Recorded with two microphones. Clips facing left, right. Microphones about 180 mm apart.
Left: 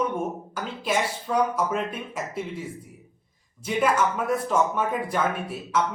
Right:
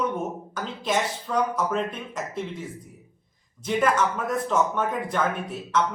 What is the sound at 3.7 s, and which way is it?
Speech, 5° left (ahead or behind).